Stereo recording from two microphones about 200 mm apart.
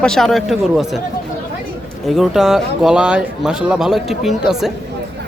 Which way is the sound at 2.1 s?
Centre (ahead or behind).